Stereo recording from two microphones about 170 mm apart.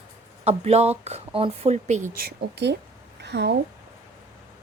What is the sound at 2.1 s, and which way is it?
Speech, 75° right (ahead or behind).